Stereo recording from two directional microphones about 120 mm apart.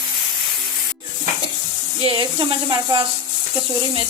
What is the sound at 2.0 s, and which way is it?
Speech, 40° right (ahead or behind).